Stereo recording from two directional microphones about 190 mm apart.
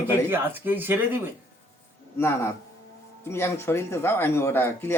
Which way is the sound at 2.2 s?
15° left (ahead or behind).